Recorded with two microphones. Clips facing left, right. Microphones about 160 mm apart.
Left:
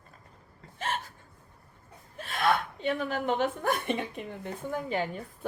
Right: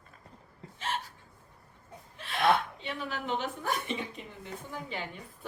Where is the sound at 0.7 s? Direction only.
50° left (ahead or behind).